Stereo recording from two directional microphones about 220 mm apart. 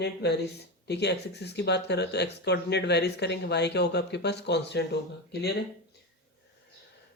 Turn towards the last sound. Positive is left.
turn(degrees=50)  # may be behind; listen again after turning